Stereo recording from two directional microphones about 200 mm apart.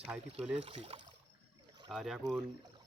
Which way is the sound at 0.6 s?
30° right (ahead or behind).